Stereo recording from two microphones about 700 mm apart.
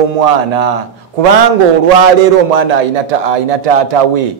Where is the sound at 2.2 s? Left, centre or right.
Right.